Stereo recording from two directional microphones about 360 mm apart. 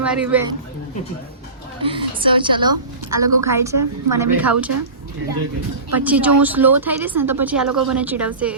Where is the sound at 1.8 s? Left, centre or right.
Centre.